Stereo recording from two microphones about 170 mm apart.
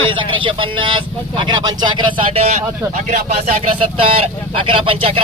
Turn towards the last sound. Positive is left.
turn(degrees=-35)  # may be behind; listen again after turning